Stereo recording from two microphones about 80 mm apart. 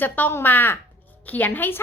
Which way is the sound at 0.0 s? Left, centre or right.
Left.